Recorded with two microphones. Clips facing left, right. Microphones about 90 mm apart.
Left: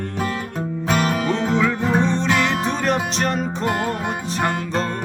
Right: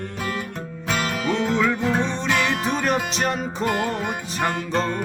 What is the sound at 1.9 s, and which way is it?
Music, centre (ahead or behind).